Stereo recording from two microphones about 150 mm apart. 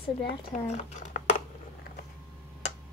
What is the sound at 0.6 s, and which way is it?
Speech, 55° left (ahead or behind).